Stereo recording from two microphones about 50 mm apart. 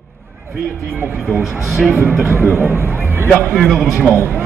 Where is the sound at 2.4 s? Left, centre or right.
Right.